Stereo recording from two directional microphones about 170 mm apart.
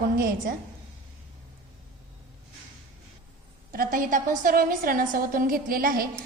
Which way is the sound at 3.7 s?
55° right (ahead or behind).